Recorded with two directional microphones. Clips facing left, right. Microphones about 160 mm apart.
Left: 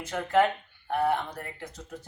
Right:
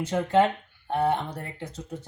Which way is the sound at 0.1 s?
25° right (ahead or behind).